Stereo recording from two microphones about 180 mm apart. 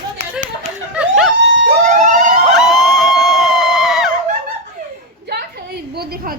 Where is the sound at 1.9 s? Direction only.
45° right (ahead or behind).